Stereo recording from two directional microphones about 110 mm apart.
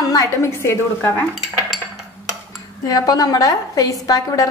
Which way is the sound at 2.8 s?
35° left (ahead or behind).